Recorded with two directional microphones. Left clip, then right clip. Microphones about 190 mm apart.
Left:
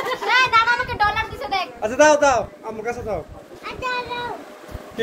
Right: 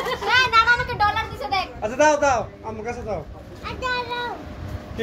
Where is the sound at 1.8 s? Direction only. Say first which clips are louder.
Left 4 dB; 50° left (ahead or behind).